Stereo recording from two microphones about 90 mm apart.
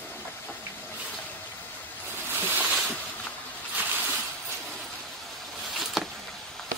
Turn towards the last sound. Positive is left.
turn(degrees=0)  # may be behind; listen again after turning